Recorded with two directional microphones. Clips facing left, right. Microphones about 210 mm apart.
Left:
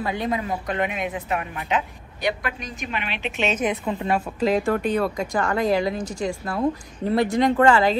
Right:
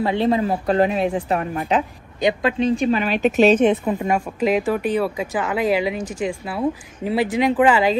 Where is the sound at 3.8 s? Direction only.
10° right (ahead or behind).